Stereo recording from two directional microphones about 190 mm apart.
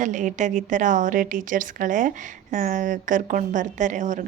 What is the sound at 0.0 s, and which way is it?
Speech, 40° right (ahead or behind).